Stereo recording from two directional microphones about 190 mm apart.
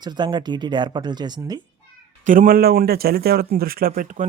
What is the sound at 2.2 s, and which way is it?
Speech, 45° right (ahead or behind).